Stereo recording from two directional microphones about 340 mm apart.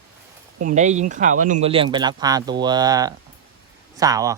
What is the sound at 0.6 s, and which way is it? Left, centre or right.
Speech, right.